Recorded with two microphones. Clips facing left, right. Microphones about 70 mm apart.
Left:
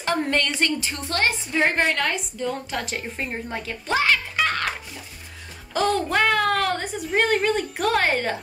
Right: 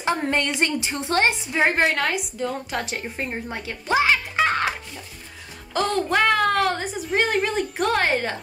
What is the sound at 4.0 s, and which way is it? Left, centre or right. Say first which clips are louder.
Music: right 1 dB; centre.